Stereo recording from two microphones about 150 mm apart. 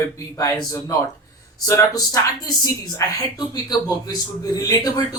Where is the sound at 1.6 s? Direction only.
20° left (ahead or behind).